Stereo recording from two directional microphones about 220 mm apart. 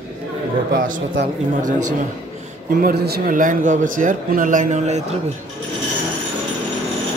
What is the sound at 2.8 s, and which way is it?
Speech, 40° right (ahead or behind).